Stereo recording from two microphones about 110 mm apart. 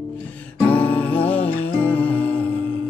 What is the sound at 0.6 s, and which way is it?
Music, 15° left (ahead or behind).